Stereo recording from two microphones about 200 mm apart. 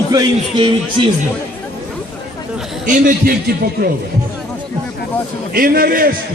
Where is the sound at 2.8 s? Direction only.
40° right (ahead or behind).